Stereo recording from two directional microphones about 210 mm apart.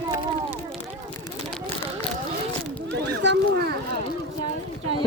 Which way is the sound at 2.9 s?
55° right (ahead or behind).